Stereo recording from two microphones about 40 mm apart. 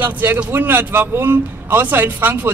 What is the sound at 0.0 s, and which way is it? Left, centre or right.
A man's voice, right.